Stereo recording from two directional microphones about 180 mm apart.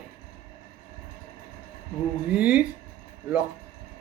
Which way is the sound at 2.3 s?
5° right (ahead or behind).